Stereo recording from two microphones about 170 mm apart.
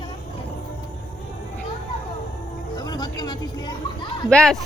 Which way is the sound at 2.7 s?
25° left (ahead or behind).